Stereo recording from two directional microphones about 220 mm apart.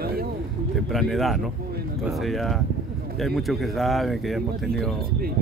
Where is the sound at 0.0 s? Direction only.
45° right (ahead or behind).